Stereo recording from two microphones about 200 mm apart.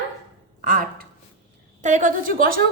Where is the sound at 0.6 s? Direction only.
40° right (ahead or behind).